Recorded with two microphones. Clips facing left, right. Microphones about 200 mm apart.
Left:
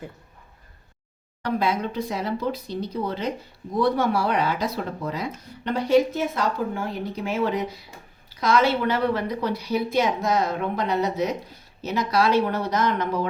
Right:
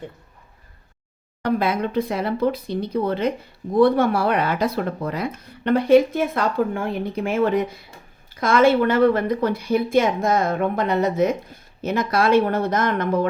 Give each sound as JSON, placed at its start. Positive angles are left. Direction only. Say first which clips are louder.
{"t": 1.4, "sound": "speech", "louder": "right 3 dB", "side_deg": -55}